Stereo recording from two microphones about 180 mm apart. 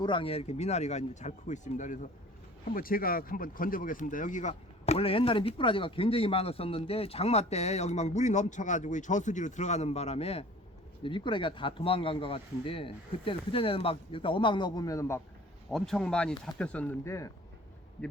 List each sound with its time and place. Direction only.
0.0 s speech: 30° left (ahead or behind)
15.7 s speech: 5° left (ahead or behind)